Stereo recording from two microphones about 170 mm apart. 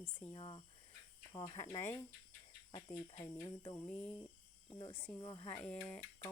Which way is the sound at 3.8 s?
5° left (ahead or behind).